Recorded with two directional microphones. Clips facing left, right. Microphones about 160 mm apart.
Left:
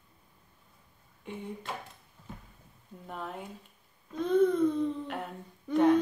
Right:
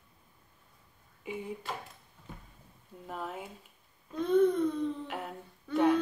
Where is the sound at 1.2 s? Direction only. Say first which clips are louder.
Right 2 dB; 5° right (ahead or behind).